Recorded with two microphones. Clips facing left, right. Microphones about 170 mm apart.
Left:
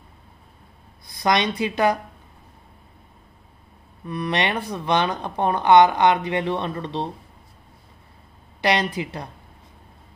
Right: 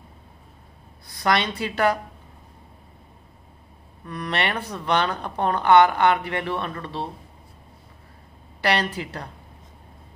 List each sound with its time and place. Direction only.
1.1 s speech: 15° left (ahead or behind)
4.0 s speech: 15° left (ahead or behind)
8.5 s speech: 15° left (ahead or behind)